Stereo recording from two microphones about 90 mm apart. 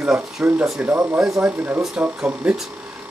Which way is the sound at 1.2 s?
10° right (ahead or behind).